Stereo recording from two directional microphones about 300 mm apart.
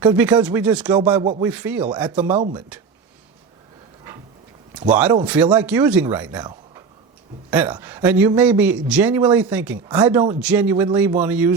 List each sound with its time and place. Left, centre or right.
0.0 s speech: centre
1.2 s speech: centre
1.5 s speech: centre
2.3 s speech: centre
2.6 s speech: centre
4.9 s speech: centre